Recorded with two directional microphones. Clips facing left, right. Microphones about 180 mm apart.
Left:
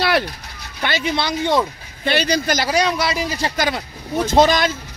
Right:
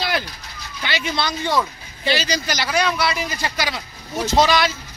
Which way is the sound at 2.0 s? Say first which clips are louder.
Left 4 dB; 55° left (ahead or behind).